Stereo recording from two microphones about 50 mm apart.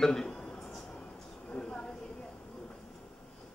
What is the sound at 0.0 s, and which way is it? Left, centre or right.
Speech, centre.